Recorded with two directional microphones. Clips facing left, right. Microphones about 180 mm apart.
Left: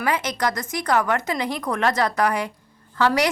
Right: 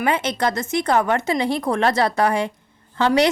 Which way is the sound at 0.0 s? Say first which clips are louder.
Right 3 dB; 25° right (ahead or behind).